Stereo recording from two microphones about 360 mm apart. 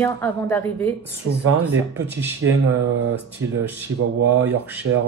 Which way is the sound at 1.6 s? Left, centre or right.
Centre.